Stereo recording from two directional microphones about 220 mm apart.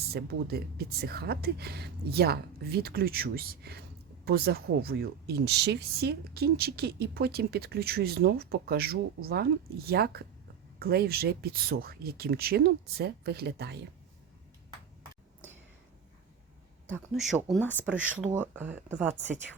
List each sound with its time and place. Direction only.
0.1 s speech: 45° right (ahead or behind)
16.9 s speech: centre (ahead or behind)
18.2 s speech: 5° right (ahead or behind)